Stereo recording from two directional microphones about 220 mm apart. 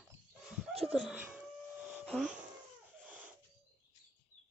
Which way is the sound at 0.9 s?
5° right (ahead or behind).